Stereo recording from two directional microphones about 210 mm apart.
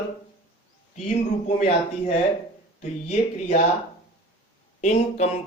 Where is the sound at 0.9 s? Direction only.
30° left (ahead or behind).